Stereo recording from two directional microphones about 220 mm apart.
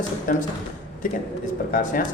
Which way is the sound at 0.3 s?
35° left (ahead or behind).